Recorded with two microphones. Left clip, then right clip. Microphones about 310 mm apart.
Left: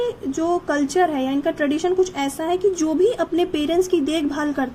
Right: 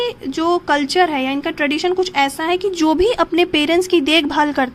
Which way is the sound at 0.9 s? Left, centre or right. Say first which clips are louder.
Right 4 dB; right.